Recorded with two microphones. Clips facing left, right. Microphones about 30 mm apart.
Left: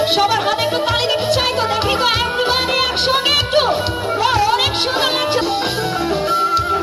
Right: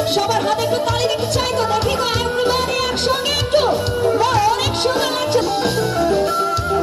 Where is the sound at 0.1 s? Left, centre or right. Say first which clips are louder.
Left 2 dB; left.